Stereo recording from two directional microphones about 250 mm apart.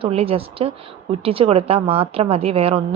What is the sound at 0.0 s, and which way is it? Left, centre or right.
A woman's voice, right.